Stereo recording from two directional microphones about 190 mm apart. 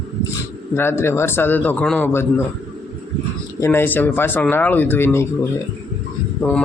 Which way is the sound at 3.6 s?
10° left (ahead or behind).